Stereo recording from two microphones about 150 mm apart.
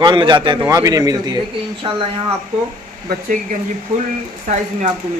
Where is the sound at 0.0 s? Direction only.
30° right (ahead or behind).